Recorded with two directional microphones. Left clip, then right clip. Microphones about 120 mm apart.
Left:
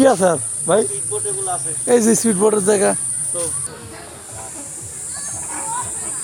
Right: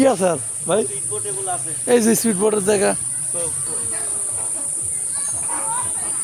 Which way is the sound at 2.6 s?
10° left (ahead or behind).